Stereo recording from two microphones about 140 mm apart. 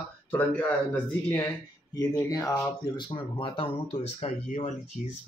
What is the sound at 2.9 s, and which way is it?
Speech, 35° left (ahead or behind).